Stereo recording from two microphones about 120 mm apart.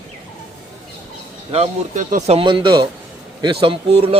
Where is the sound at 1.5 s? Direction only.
55° right (ahead or behind).